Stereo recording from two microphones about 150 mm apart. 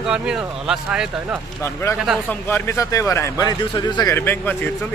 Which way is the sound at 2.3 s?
15° left (ahead or behind).